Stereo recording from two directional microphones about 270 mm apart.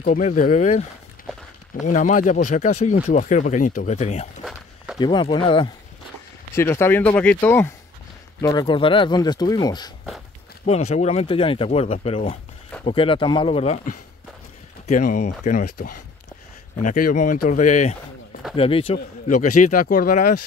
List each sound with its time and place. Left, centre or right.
0.0 s speech: left
1.3 s walk: centre
1.9 s speech: left